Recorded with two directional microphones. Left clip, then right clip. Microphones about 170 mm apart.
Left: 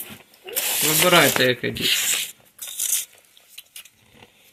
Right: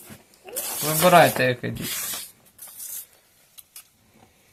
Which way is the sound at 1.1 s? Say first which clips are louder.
Right 1 dB; 50° right (ahead or behind).